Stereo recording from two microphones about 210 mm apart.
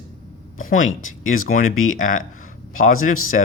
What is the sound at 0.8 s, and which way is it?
Speech, 70° left (ahead or behind).